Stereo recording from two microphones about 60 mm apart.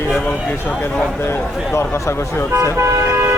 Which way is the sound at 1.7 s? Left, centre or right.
Left.